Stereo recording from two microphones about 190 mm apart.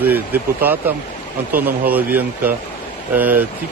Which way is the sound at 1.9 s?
10° right (ahead or behind).